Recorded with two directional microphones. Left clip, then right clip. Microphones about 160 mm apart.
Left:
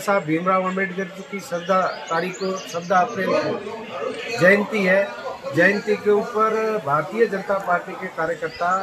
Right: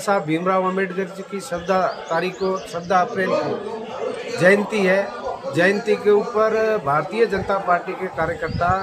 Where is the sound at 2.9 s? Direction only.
15° right (ahead or behind).